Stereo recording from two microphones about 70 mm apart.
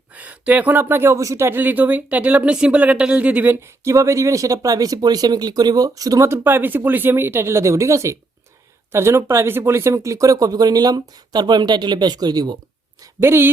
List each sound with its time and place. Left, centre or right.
0.1 s a sound: right
0.7 s speech: right
1.2 s speech: right
1.5 s speech: right
3.8 s speech: right
6.2 s speech: right
13.0 s a woman's voice: right